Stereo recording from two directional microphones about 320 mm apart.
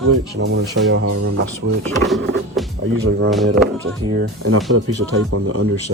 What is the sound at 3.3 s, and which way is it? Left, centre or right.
Speech, centre.